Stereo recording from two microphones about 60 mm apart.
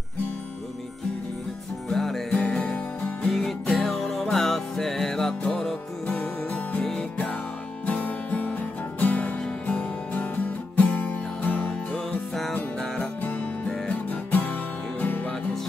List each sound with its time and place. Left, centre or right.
1.9 s music: centre
2.3 s music: centre
3.3 s music: centre
7.8 s music: left
12.7 s music: centre
13.2 s music: left
13.7 s music: left